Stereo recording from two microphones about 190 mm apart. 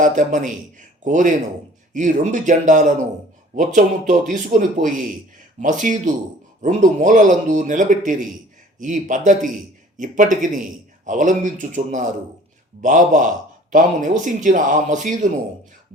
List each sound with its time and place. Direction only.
0.0 s speech: 40° right (ahead or behind)